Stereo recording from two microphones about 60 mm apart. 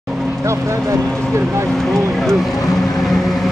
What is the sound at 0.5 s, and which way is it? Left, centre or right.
Speech, right.